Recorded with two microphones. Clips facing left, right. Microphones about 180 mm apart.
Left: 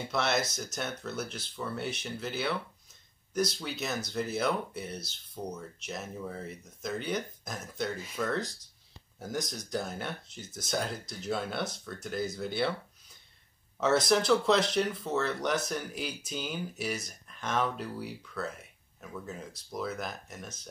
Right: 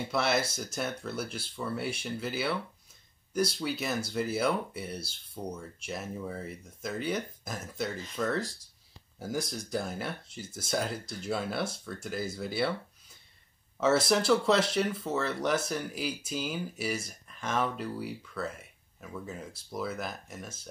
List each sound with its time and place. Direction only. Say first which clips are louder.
0.1 s speech: right 1 dB; 5° right (ahead or behind)
8.0 s speech: right 1 dB; 10° left (ahead or behind)
9.5 s speech: right 1 dB; 5° right (ahead or behind)
13.7 s speech: even; 5° right (ahead or behind)